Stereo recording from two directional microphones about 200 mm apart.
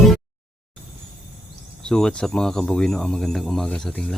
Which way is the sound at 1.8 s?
5° left (ahead or behind).